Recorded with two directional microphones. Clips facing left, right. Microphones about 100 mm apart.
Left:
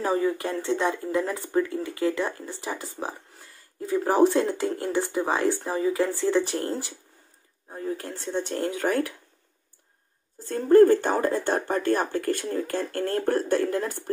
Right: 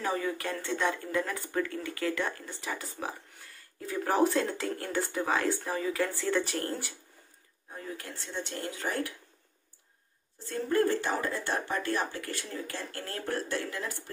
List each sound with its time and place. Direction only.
0.0 s speech: 25° left (ahead or behind)
3.9 s speech: 30° left (ahead or behind)
7.7 s speech: 35° left (ahead or behind); by 9.1 s 55° left (ahead or behind)
10.4 s speech: 40° left (ahead or behind)